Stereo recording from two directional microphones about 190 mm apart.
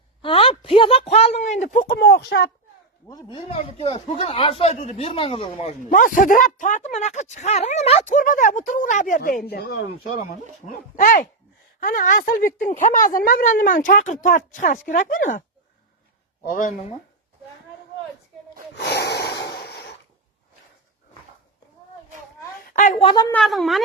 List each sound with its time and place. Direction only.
0.2 s speech: 30° left (ahead or behind)
2.0 s speech: 60° left (ahead or behind)
3.1 s speech: 20° left (ahead or behind); by 9.4 s 45° left (ahead or behind)
9.5 s a woman's voice: 55° left (ahead or behind)
16.5 s a woman's voice: 45° left (ahead or behind)
18.8 s snort: 60° left (ahead or behind)
19.5 s a sound: 55° left (ahead or behind)
22.6 s a sound: 40° left (ahead or behind)
23.0 s speech: 25° left (ahead or behind)
23.3 s speech: centre (ahead or behind)